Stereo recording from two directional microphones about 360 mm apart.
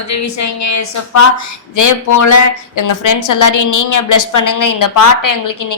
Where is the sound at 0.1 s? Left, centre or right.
Left.